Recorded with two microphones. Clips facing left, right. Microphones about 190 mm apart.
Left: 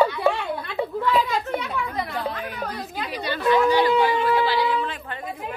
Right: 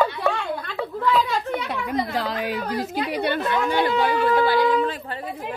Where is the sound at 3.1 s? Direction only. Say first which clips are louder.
Left 4 dB; 60° right (ahead or behind).